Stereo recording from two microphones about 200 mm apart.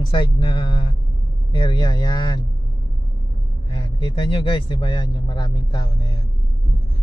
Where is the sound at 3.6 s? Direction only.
25° left (ahead or behind).